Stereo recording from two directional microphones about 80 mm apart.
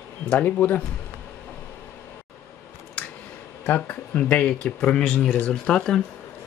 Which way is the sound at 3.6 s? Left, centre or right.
Left.